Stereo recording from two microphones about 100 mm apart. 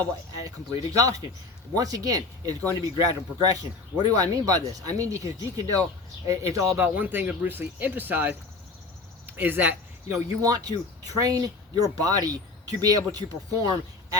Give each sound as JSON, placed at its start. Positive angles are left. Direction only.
{"t": 0.4, "sound": "speech", "side_deg": -35}
{"t": 6.8, "sound": "speech", "side_deg": -20}
{"t": 10.4, "sound": "speech", "side_deg": -40}